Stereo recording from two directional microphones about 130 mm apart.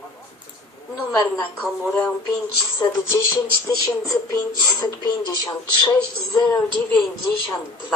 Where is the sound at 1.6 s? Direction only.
15° left (ahead or behind).